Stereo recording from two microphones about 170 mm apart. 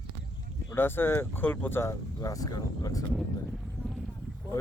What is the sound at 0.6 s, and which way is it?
Speech, 15° left (ahead or behind).